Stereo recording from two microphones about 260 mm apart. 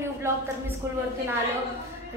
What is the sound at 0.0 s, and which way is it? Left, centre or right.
Speech, centre.